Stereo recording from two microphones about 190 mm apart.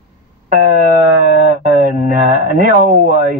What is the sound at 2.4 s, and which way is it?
Speech, 45° right (ahead or behind).